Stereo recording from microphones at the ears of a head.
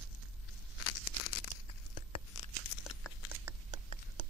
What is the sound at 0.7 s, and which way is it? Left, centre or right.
Tearing, left.